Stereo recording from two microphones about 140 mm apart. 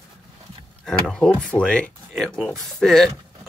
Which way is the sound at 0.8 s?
5° left (ahead or behind).